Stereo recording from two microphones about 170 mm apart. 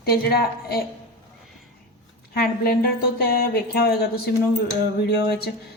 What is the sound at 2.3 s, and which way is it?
Speech, 65° left (ahead or behind).